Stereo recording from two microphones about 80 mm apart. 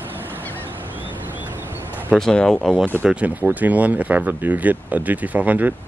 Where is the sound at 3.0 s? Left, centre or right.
Centre.